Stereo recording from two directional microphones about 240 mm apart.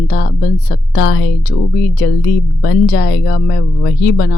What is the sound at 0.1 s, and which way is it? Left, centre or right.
Speech, left.